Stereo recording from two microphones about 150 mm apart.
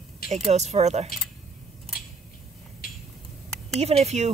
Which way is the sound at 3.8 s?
45° right (ahead or behind).